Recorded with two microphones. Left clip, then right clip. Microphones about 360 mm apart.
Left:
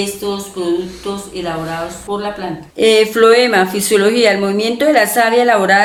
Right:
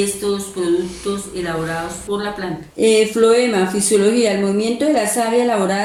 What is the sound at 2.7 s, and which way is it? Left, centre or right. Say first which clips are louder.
Speech: left 3 dB; left.